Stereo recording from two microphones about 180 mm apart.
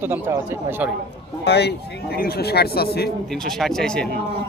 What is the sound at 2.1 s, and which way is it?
Speech, 60° left (ahead or behind).